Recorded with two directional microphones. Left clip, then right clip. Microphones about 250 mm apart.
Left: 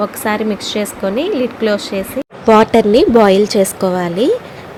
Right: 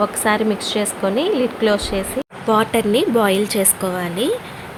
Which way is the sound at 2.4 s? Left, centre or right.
Left.